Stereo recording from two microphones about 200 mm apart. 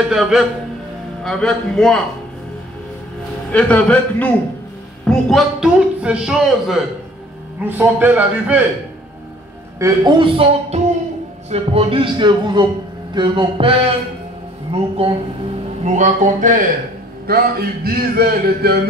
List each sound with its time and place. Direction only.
0.1 s a man's voice: centre (ahead or behind)
3.5 s a man's voice: 5° left (ahead or behind)
9.8 s speech: 20° right (ahead or behind); by 16.6 s 40° right (ahead or behind)
17.8 s speech: 50° right (ahead or behind)